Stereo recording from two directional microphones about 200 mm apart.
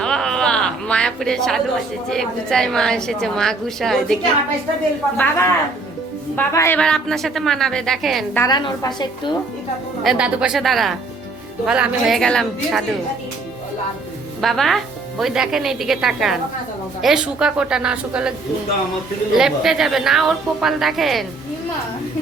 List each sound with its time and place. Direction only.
0.0 s a sound: 5° left (ahead or behind)
2.0 s a woman's voice: centre (ahead or behind)
8.4 s a woman's voice: 20° left (ahead or behind)
10.0 s a woman's voice: 5° right (ahead or behind)
14.4 s a woman's voice: centre (ahead or behind)